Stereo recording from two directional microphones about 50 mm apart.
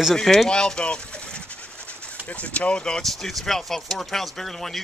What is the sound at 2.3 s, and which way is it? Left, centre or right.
Speech, left.